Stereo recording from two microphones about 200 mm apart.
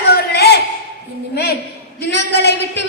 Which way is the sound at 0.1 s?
55° left (ahead or behind).